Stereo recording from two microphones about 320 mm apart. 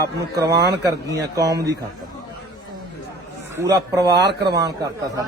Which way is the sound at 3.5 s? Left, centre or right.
Centre.